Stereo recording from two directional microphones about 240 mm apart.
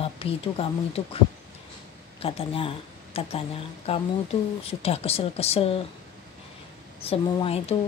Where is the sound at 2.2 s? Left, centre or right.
Left.